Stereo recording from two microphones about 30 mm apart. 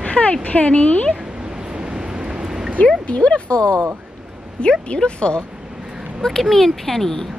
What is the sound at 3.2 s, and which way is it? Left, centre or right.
Speech, left.